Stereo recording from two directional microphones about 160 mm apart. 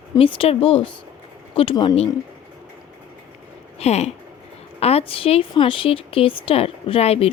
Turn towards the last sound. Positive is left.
turn(degrees=40)  # may be behind; listen again after turning